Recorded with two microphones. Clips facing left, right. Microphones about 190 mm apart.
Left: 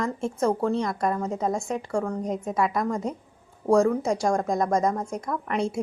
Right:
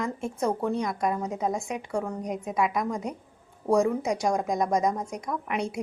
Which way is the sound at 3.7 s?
20° right (ahead or behind).